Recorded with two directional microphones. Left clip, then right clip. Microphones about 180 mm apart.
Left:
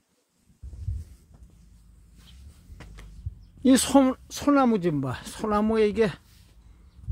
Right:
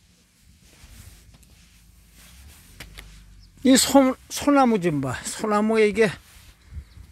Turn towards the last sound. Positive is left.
turn(degrees=-20)  # may be behind; listen again after turning